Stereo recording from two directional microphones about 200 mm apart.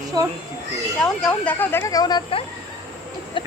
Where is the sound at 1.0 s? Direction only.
5° left (ahead or behind); by 2.4 s 25° left (ahead or behind).